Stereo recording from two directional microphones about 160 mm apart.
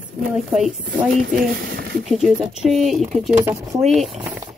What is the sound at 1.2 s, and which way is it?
Speech, 75° right (ahead or behind).